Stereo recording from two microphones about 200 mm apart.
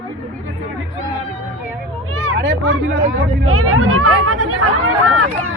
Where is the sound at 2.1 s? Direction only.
90° right.